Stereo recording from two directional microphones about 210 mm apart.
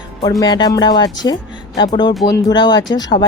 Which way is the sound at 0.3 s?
20° left (ahead or behind).